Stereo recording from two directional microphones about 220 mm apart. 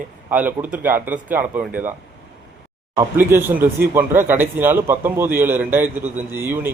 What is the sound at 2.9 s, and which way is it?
A man's voice, 10° right (ahead or behind).